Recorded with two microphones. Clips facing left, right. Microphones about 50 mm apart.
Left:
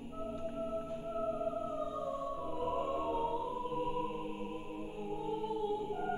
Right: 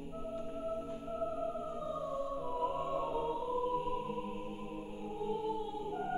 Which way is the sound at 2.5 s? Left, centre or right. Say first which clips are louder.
Even; centre.